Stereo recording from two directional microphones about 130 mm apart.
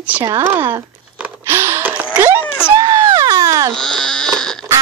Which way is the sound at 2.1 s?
15° right (ahead or behind).